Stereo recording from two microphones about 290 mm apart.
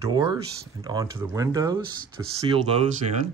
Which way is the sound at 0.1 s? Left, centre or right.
Centre.